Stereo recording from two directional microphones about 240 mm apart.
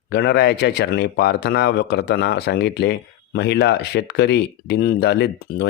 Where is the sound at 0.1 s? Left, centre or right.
Left.